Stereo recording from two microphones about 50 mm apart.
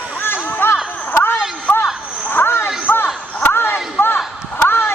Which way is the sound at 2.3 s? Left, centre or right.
Left.